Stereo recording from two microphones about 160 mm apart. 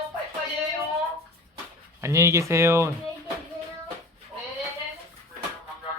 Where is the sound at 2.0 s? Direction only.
20° right (ahead or behind).